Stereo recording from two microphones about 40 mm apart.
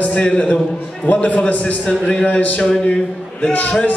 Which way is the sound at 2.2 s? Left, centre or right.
Left.